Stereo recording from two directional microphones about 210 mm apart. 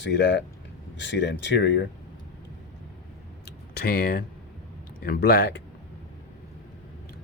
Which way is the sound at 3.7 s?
45° left (ahead or behind).